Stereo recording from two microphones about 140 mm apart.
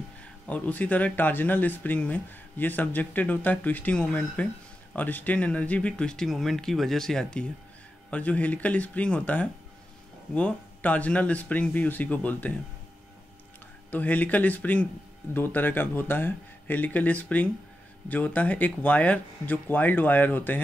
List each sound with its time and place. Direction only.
0.2 s speech: 10° left (ahead or behind)
13.8 s speech: 10° left (ahead or behind)